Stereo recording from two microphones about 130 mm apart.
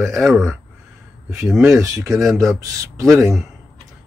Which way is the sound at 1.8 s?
25° right (ahead or behind).